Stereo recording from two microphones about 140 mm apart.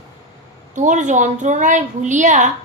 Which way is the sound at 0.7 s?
60° right (ahead or behind).